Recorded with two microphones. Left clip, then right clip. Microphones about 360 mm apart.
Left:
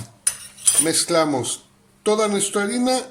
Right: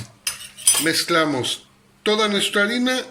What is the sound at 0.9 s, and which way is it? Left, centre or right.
Speech, centre.